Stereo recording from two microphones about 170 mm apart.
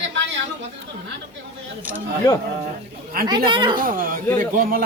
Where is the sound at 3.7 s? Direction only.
60° right (ahead or behind).